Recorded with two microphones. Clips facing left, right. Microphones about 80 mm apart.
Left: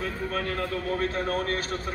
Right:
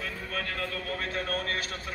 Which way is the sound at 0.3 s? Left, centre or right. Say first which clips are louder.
Left 3 dB; left.